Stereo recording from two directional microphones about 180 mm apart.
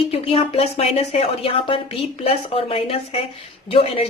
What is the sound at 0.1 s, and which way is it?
Speech, 30° left (ahead or behind).